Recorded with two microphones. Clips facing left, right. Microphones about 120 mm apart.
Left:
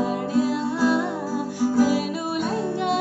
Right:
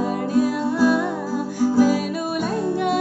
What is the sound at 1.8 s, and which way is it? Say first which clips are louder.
Music: right 2 dB; 20° left (ahead or behind).